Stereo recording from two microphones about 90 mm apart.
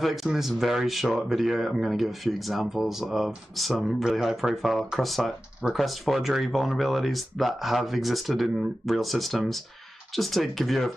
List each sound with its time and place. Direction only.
0.0 s speech: centre (ahead or behind)